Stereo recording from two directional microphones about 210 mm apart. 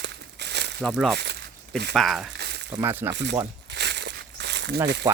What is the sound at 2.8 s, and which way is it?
Speech, 10° right (ahead or behind).